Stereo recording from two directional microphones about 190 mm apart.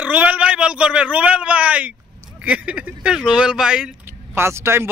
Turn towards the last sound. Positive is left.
turn(degrees=-10)  # may be behind; listen again after turning